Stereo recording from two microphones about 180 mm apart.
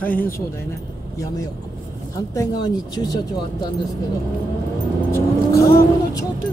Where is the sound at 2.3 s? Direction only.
20° left (ahead or behind).